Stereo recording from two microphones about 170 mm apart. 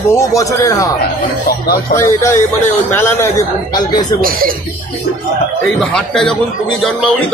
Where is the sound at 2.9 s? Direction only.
15° left (ahead or behind).